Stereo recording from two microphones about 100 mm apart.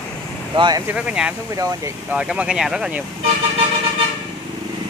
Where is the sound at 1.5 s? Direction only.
35° right (ahead or behind).